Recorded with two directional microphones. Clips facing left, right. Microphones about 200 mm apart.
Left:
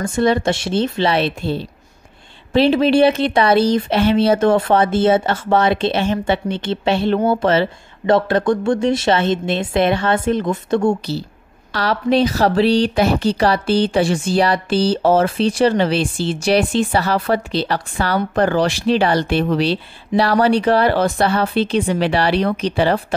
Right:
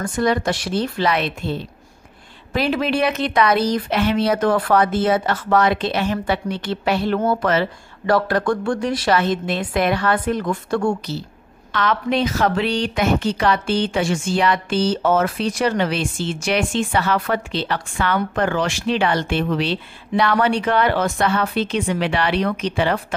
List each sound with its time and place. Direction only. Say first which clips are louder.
0.0 s speech: left 3 dB; 25° left (ahead or behind)